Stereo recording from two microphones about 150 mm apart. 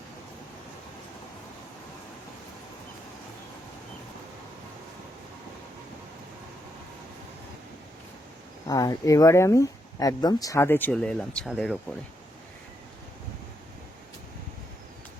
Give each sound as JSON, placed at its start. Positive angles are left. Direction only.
{"t": 8.6, "sound": "speech", "side_deg": 25}